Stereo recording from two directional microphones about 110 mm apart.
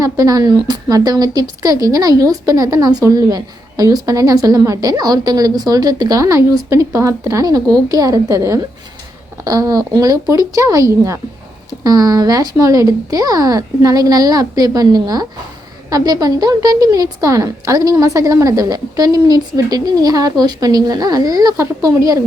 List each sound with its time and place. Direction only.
0.0 s a woman's voice: 35° right (ahead or behind)